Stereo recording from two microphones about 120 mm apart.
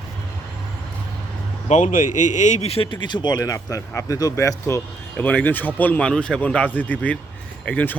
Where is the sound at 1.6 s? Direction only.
85° left.